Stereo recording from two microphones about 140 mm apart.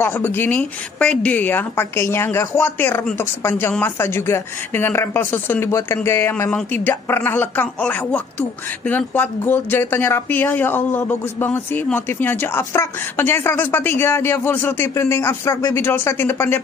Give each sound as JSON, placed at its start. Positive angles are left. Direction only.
{"t": 0.0, "sound": "speech", "side_deg": 15}